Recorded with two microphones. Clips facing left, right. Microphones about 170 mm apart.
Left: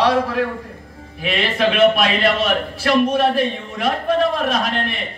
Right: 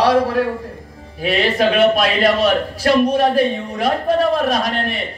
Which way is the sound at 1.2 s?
40° right (ahead or behind).